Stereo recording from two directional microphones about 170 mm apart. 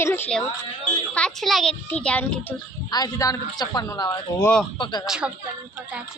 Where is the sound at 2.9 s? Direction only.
25° left (ahead or behind).